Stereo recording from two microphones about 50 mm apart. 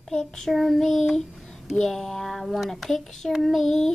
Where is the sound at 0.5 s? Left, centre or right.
Centre.